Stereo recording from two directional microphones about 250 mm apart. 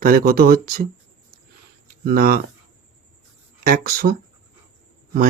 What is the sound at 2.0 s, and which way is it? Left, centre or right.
Speech, right.